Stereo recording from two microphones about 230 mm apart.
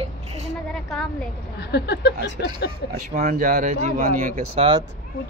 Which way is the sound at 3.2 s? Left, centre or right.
Right.